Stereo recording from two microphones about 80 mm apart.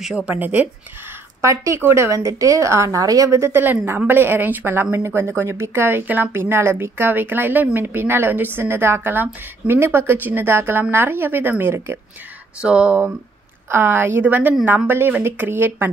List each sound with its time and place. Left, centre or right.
0.1 s speech: centre
1.4 s a woman's voice: right
12.6 s speech: centre
13.7 s speech: right